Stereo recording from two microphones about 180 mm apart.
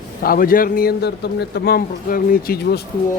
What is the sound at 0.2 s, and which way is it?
A man's voice, 55° left (ahead or behind).